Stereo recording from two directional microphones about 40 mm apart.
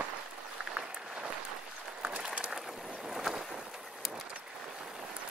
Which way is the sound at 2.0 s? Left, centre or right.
Right.